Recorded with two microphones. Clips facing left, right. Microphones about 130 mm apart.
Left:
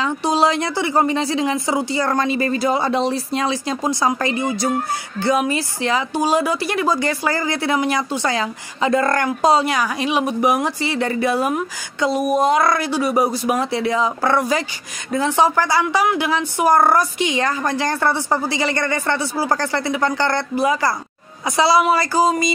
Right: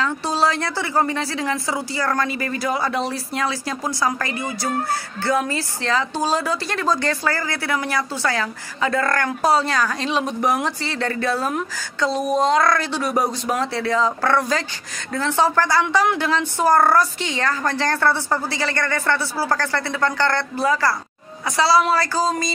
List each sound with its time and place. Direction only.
0.0 s a woman's voice: 20° left (ahead or behind)